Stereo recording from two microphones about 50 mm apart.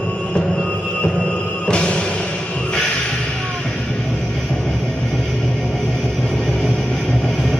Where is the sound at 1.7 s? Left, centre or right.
Centre.